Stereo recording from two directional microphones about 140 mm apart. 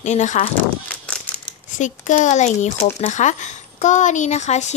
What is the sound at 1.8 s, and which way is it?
A woman's voice, 60° left (ahead or behind).